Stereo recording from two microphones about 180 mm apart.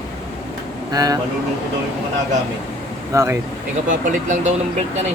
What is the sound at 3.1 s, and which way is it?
Speech, 15° right (ahead or behind).